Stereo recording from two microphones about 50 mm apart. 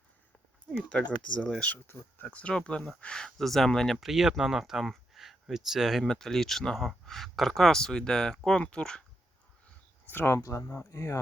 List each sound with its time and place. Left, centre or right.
0.9 s speech: left; by 6.1 s centre
6.1 s speech: centre
10.2 s speech: left
10.9 s speech: left